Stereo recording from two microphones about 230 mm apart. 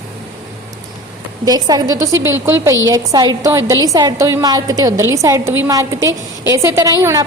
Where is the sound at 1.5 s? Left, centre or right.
Centre.